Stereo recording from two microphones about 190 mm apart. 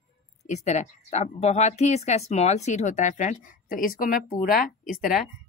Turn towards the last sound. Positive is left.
turn(degrees=0)  # may be behind; listen again after turning